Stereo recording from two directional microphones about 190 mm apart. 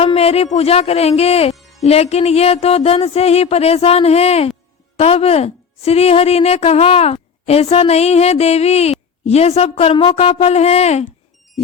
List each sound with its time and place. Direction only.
0.0 s a woman's voice: 30° left (ahead or behind)